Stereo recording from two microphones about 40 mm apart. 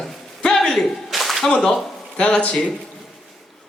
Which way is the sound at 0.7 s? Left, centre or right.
Centre.